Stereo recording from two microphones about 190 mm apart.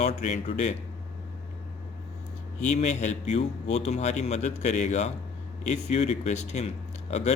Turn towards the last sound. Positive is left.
turn(degrees=35)  # may be behind; listen again after turning